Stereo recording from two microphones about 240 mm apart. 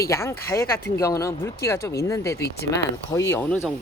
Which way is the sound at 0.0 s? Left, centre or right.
Centre.